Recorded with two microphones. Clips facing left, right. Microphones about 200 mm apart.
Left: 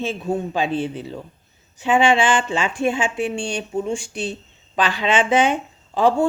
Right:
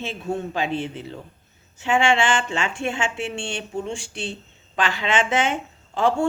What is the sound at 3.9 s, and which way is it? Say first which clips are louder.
Speech: left 5 dB; 30° right (ahead or behind).